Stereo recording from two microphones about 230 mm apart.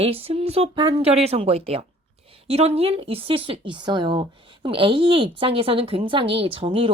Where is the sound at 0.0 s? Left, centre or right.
Right.